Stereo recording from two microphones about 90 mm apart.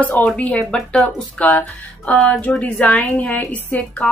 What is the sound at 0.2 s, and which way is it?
Speech, 20° left (ahead or behind).